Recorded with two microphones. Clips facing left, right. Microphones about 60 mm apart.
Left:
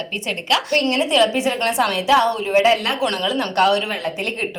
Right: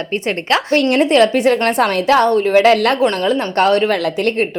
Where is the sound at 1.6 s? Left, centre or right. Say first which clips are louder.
Right 4 dB; right.